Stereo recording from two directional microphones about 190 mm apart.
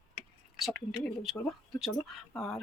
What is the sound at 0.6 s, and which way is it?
Speech, centre (ahead or behind).